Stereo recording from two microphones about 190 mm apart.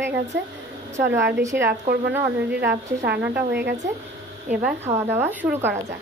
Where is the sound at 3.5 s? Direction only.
60° right (ahead or behind).